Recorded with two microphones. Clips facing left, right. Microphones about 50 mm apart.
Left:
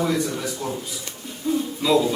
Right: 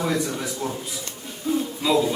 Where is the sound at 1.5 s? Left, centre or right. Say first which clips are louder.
Left 1 dB; centre.